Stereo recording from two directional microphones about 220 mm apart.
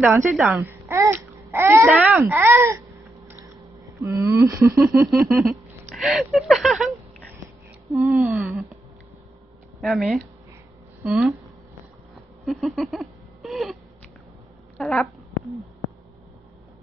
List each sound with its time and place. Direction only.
0.0 s speech: 10° right (ahead or behind)
4.0 s speech: 15° right (ahead or behind)
5.9 s speech: centre (ahead or behind)
9.8 s speech: centre (ahead or behind)
12.4 s a sound: centre (ahead or behind)
14.8 s a sound: centre (ahead or behind)